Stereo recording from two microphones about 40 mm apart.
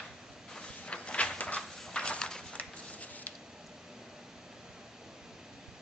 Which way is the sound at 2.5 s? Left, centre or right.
Left.